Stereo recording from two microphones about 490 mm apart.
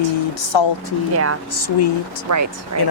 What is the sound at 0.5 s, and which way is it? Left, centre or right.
Speech, left.